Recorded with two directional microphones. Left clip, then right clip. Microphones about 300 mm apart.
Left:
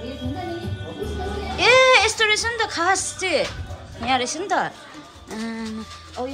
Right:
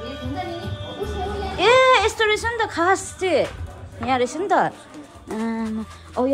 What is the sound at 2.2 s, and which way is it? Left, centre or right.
A woman's voice, centre.